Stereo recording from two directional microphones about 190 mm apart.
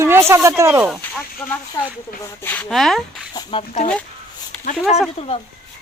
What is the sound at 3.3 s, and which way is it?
Speech, 25° left (ahead or behind).